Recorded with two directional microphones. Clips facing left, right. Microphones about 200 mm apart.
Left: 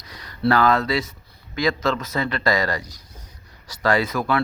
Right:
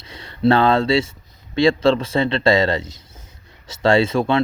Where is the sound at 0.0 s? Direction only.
25° right (ahead or behind).